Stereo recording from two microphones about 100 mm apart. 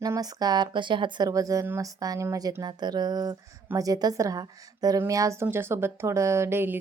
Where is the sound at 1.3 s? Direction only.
35° right (ahead or behind).